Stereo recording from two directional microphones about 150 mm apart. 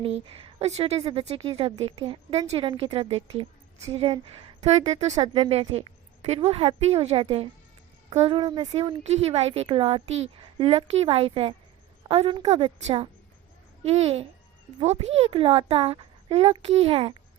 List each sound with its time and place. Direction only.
0.0 s speech: 40° right (ahead or behind)
4.6 s speech: 45° right (ahead or behind)
5.2 s speech: 30° right (ahead or behind)